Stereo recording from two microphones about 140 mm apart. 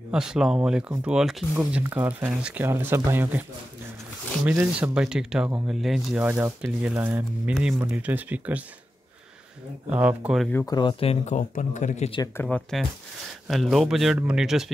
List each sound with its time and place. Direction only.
0.1 s speech: 5° right (ahead or behind)
4.7 s speech: 5° right (ahead or behind)
6.2 s speech: 15° right (ahead or behind)
7.5 s speech: centre (ahead or behind)
7.8 s speech: 10° right (ahead or behind)
9.8 s speech: 10° right (ahead or behind)
10.5 s speech: 25° left (ahead or behind); by 12.1 s 55° left (ahead or behind)
12.4 s speech: 5° left (ahead or behind)